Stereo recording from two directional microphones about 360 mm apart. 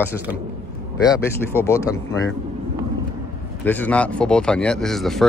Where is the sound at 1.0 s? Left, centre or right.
Centre.